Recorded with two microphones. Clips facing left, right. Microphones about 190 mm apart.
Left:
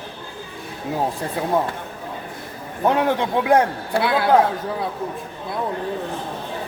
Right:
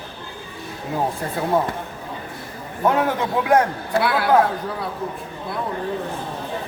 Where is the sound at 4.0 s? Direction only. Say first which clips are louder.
Left 1 dB; 20° left (ahead or behind).